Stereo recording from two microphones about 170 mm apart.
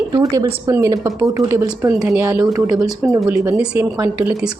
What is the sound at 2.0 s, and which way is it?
Speech, 5° right (ahead or behind).